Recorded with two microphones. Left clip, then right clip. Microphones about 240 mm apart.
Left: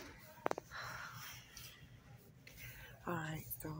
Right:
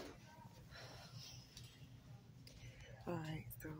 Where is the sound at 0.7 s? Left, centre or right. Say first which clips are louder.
Left 10 dB; centre.